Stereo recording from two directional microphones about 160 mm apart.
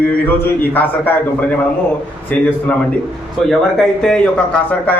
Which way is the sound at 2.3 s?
10° left (ahead or behind).